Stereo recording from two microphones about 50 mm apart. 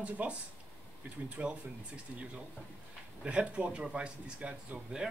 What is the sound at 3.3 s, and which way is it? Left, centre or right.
Speech, right.